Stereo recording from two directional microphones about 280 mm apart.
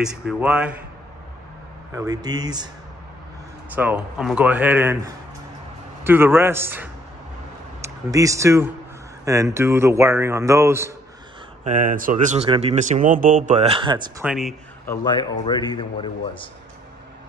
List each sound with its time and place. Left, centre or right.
0.0 s speech: centre
2.0 s a man's voice: centre
3.7 s a man's voice: centre
11.6 s speech: right
14.2 s speech: centre
14.9 s speech: centre